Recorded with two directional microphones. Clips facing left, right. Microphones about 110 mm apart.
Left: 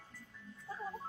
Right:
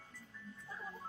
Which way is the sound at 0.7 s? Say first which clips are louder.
Left 6 dB; 20° left (ahead or behind).